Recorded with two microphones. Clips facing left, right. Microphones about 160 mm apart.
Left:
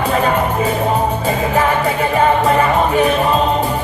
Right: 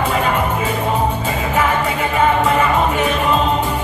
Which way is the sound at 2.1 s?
35° left (ahead or behind).